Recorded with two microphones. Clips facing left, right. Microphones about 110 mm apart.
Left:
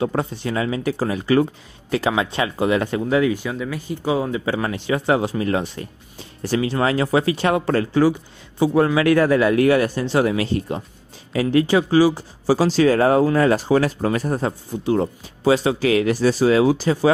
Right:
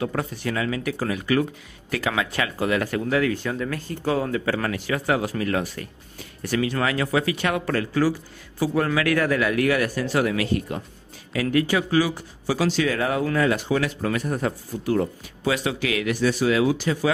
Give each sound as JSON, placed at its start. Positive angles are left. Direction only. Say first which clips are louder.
{"t": 0.0, "sound": "speech", "louder": "left 4 dB", "side_deg": 25}